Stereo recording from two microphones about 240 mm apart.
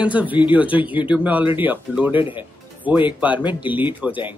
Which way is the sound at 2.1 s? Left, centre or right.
Left.